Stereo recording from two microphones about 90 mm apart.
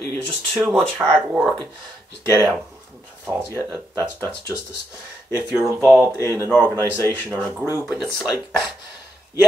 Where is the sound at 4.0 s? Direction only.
20° left (ahead or behind).